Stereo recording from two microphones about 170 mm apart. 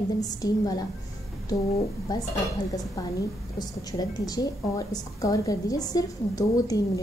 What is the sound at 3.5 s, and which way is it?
A woman's voice, 25° left (ahead or behind).